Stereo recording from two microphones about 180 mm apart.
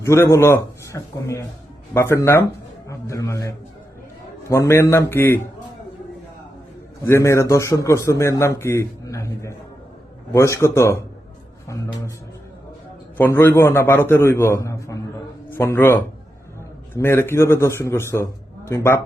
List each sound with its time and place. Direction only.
0.0 s a man's voice: 15° left (ahead or behind)
7.0 s a man's voice: 15° left (ahead or behind)
13.1 s a man's voice: 10° left (ahead or behind)